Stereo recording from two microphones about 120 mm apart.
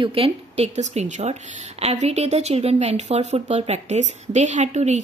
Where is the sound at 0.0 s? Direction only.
50° right (ahead or behind).